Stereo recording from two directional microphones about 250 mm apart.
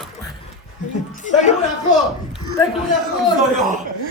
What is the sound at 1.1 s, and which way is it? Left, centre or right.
Speech, left.